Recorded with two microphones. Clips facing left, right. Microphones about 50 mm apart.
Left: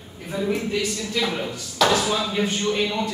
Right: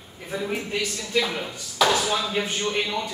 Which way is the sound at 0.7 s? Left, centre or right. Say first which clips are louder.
Left 3 dB; right.